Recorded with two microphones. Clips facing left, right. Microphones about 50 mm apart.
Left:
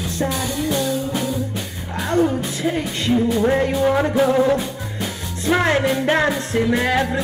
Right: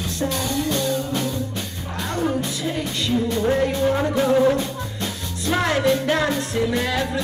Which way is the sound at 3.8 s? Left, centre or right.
Left.